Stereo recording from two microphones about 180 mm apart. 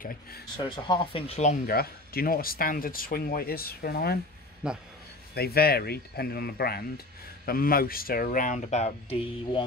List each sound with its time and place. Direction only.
0.0 s speech: 55° left (ahead or behind)
0.6 s speech: 25° left (ahead or behind)
1.7 s speech: 55° left (ahead or behind)
4.6 s speech: 5° right (ahead or behind)
5.3 s speech: 60° left (ahead or behind); by 9.7 s 30° left (ahead or behind)